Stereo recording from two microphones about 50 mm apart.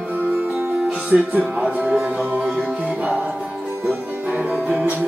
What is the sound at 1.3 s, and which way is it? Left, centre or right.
Speech, right.